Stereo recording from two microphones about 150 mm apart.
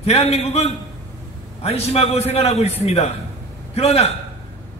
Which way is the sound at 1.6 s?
45° left (ahead or behind).